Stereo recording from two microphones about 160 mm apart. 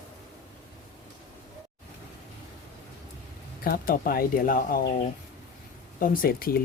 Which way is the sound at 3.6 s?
65° left (ahead or behind).